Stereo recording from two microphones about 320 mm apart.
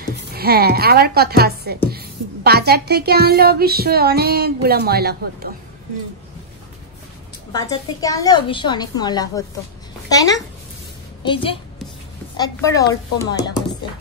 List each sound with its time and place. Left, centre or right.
0.3 s a woman's voice: right
7.5 s a woman's voice: centre